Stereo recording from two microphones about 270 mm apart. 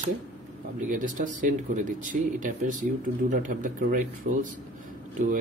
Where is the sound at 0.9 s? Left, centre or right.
Right.